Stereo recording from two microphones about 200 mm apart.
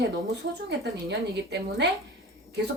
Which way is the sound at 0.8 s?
55° right (ahead or behind).